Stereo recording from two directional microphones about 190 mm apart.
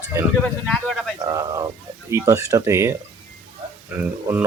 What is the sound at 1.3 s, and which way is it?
Speech, 20° right (ahead or behind).